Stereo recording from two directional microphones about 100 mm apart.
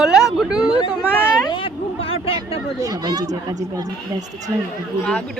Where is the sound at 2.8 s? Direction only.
45° right (ahead or behind).